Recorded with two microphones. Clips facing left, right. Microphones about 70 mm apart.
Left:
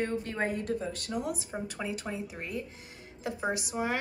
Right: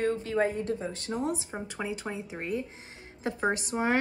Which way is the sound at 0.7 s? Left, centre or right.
Right.